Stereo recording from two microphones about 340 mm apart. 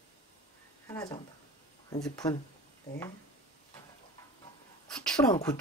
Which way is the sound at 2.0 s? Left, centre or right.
Centre.